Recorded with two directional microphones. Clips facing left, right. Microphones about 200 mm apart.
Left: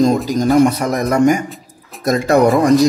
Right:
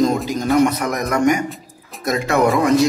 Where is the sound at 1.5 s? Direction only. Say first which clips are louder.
Even; centre (ahead or behind).